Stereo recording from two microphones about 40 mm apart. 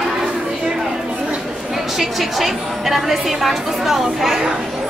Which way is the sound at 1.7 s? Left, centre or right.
Centre.